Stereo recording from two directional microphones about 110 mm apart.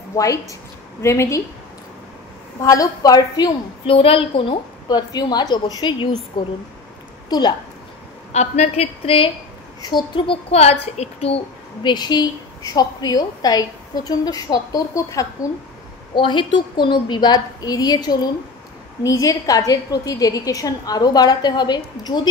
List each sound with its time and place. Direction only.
0.1 s a woman's voice: 30° left (ahead or behind)
2.6 s a woman's voice: 30° left (ahead or behind)
3.9 s a child's voice: 55° left (ahead or behind)
4.8 s a woman's voice: 40° left (ahead or behind)
8.3 s a woman's voice: 90° left; by 9.3 s 55° left (ahead or behind)
9.8 s a child's voice: 40° left (ahead or behind); by 11.4 s 65° left (ahead or behind)
11.8 s a woman's voice: 40° left (ahead or behind)
16.2 s a woman's voice: 45° left (ahead or behind)